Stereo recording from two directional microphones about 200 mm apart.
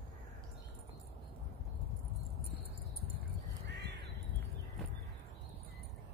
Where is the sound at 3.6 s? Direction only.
60° right (ahead or behind).